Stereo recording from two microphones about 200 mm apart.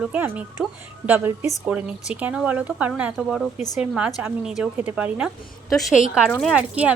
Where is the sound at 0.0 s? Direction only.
5° right (ahead or behind).